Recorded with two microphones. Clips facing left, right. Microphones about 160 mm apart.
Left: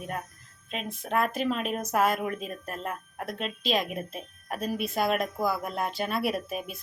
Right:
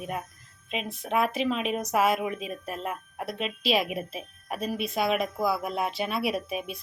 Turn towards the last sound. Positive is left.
turn(degrees=0)  # may be behind; listen again after turning